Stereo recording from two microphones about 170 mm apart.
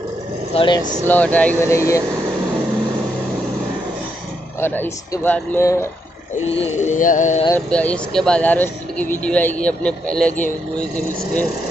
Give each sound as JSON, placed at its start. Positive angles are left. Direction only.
{"t": 0.6, "sound": "speech", "side_deg": 25}
{"t": 1.0, "sound": "speech", "side_deg": 10}
{"t": 4.6, "sound": "speech", "side_deg": 15}
{"t": 6.5, "sound": "speech", "side_deg": 40}
{"t": 7.7, "sound": "speech", "side_deg": 5}